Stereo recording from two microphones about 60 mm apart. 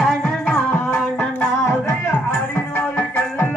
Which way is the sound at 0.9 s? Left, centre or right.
Left.